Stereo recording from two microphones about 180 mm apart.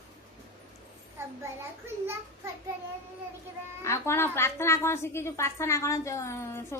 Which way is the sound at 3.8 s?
15° left (ahead or behind).